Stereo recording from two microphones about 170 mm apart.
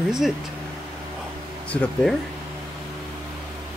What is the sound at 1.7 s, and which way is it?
Speech, 10° left (ahead or behind).